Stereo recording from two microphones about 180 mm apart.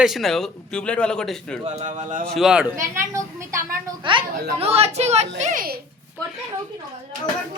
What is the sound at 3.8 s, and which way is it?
A woman's voice, 25° right (ahead or behind).